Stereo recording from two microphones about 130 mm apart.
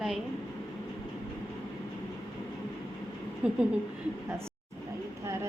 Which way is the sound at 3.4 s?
10° right (ahead or behind).